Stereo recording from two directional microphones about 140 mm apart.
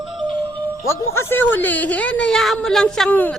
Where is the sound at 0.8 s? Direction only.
20° left (ahead or behind).